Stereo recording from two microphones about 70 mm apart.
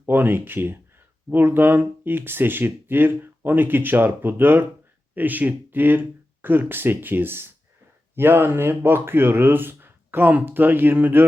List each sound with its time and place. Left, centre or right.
0.0 s speech: right